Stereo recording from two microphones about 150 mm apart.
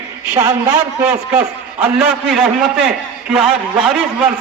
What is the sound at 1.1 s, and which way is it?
A man's voice, 10° right (ahead or behind).